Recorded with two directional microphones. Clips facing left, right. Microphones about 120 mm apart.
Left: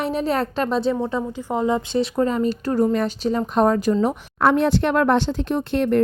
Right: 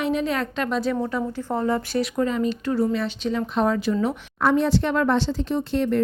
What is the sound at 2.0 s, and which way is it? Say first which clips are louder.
A woman's voice: left 3 dB; 35° left (ahead or behind).